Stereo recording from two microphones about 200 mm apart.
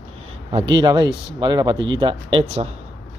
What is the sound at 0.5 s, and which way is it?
Speech, 25° right (ahead or behind).